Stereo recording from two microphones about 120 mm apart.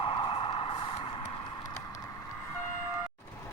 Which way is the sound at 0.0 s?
45° left (ahead or behind).